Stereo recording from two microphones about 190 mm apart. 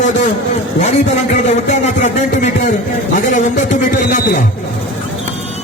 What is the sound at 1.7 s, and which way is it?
Music, 40° left (ahead or behind).